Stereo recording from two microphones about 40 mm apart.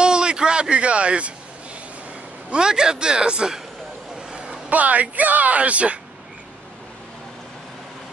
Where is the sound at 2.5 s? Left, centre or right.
Centre.